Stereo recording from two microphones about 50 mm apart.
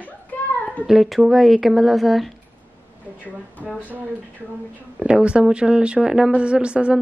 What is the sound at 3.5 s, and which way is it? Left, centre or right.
Speech, left.